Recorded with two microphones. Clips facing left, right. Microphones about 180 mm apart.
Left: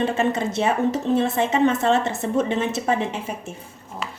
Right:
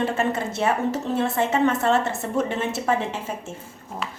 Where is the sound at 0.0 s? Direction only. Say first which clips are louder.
Left 2 dB; 20° left (ahead or behind).